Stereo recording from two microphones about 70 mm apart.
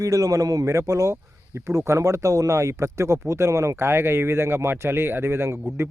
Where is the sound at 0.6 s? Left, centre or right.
Right.